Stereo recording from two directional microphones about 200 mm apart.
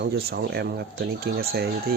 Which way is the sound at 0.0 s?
50° right (ahead or behind).